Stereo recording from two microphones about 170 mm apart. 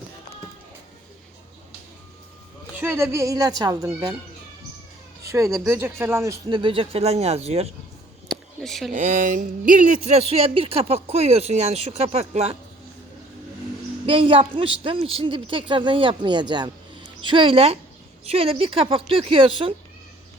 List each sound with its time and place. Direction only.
2.7 s speech: 15° right (ahead or behind)
5.2 s speech: 20° right (ahead or behind)
6.6 s speech: 30° right (ahead or behind)
8.3 s a sound: centre (ahead or behind)
8.9 s speech: 50° right (ahead or behind)
14.1 s a man's voice: 30° right (ahead or behind)